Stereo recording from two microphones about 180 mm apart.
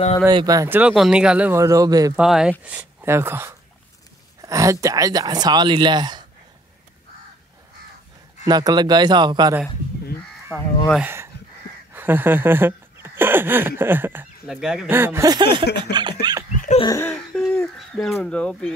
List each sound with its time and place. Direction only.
0.3 s speech: 25° right (ahead or behind)
2.1 s speech: 5° right (ahead or behind); by 6.2 s 25° right (ahead or behind)
8.5 s speech: 20° right (ahead or behind)
10.5 s speech: centre (ahead or behind)
11.0 s speech: 10° right (ahead or behind)
16.8 s a sound: 20° left (ahead or behind)
17.1 s speech: 5° left (ahead or behind)